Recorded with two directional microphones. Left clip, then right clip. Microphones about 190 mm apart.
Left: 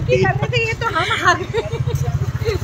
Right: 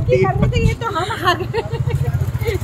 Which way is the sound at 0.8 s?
25° right (ahead or behind).